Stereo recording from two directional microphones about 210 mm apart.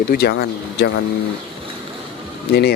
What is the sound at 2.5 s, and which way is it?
Speech, 50° left (ahead or behind).